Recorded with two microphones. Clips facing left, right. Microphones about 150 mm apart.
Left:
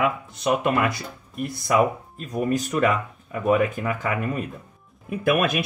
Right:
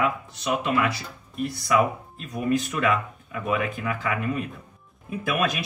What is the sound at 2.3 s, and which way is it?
Speech, 40° left (ahead or behind).